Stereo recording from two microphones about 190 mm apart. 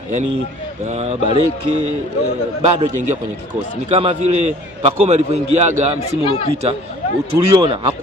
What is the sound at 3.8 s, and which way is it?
Speech, 30° right (ahead or behind).